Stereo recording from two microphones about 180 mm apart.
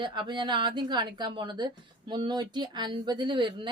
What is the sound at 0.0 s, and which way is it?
A woman's voice, 25° right (ahead or behind).